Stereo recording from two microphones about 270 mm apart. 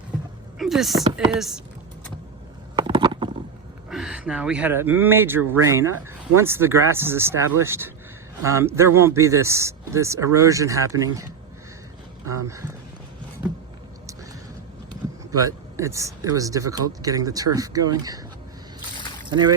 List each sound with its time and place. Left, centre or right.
0.6 s chopping: centre
2.7 s a sound: centre
3.8 s speech: centre
15.3 s speech: centre
19.3 s speech: centre